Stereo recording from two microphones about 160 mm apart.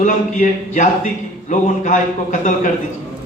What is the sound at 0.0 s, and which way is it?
A man's voice, 50° left (ahead or behind).